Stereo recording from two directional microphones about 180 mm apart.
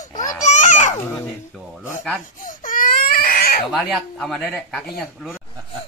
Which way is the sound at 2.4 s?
45° left (ahead or behind).